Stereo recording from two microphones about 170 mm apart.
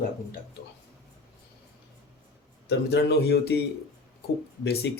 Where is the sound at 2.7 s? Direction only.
90° left.